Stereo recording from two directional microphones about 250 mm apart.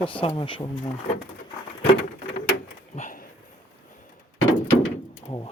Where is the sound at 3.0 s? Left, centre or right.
Left.